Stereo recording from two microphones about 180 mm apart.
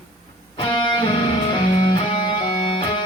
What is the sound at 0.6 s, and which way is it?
Music, 25° left (ahead or behind).